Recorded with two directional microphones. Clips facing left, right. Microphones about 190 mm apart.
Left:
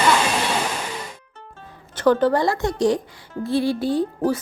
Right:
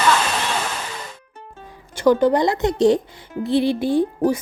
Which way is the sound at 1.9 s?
10° right (ahead or behind).